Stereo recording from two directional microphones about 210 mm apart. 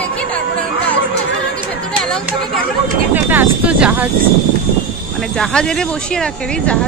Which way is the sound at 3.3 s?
5° right (ahead or behind).